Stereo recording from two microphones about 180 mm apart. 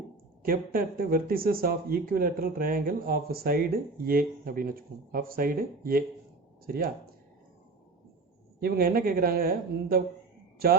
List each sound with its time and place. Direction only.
0.4 s speech: 55° right (ahead or behind)
8.6 s a man's voice: 55° right (ahead or behind)